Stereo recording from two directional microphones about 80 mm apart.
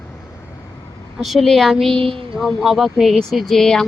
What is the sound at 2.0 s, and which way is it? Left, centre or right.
Speech, right.